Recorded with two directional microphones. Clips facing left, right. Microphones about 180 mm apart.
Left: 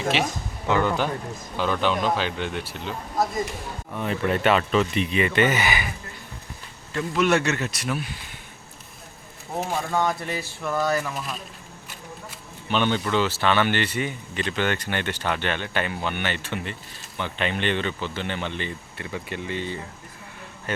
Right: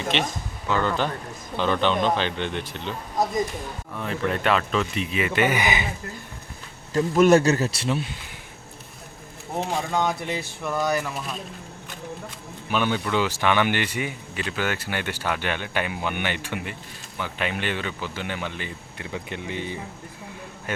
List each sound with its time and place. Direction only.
0.1 s speech: 5° left (ahead or behind)
3.9 s speech: centre (ahead or behind); by 5.9 s 20° right (ahead or behind)
6.9 s a man's voice: 40° right (ahead or behind)
9.6 s speech: 15° right (ahead or behind)
12.6 s speech: 5° right (ahead or behind)